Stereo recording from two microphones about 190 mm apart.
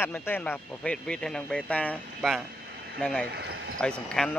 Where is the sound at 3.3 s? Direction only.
65° right (ahead or behind).